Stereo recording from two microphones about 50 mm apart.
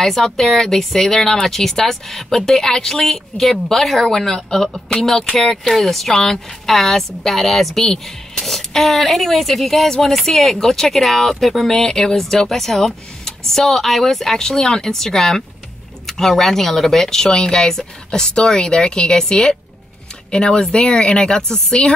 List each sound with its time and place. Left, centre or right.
0.0 s a woman's voice: centre